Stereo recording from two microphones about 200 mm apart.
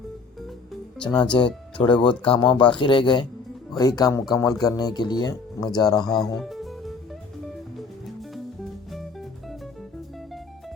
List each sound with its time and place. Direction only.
1.0 s speech: 25° left (ahead or behind)
6.1 s music: centre (ahead or behind)